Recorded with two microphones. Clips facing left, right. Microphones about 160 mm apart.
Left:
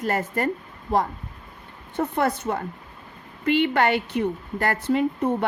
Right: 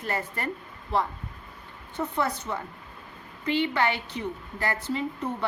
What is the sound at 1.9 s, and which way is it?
A woman's voice, 55° left (ahead or behind).